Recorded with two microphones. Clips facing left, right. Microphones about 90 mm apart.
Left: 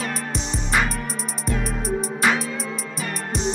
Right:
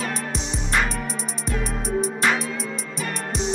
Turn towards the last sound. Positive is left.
turn(degrees=0)  # may be behind; listen again after turning